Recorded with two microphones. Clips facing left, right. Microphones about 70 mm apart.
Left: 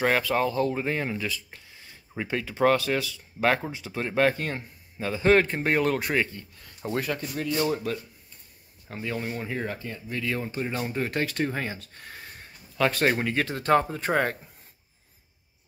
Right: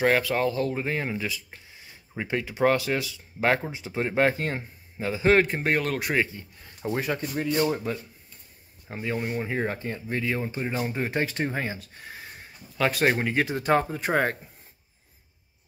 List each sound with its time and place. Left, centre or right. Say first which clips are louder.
0.0 s speech: right 1 dB; centre
1.1 s a man's voice: even; centre
9.6 s speech: right 4 dB; right
10.2 s a man's voice: left 1 dB; centre